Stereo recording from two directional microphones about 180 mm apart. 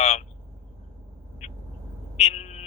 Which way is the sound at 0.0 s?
40° left (ahead or behind).